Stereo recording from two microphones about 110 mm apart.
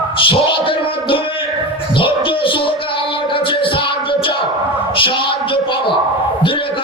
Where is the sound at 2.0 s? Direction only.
55° left (ahead or behind).